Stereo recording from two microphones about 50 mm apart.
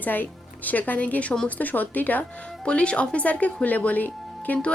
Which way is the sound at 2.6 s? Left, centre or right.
Left.